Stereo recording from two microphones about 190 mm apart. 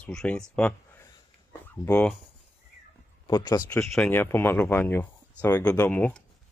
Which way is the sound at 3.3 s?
20° left (ahead or behind).